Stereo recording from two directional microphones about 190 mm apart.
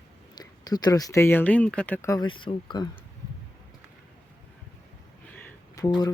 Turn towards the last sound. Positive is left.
turn(degrees=15)  # may be behind; listen again after turning